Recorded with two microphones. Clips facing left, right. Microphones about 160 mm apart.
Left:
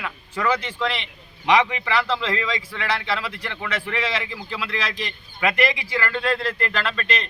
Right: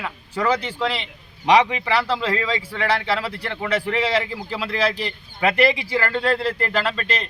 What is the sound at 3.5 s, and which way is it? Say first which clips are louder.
A man's voice: right 7 dB; 20° right (ahead or behind).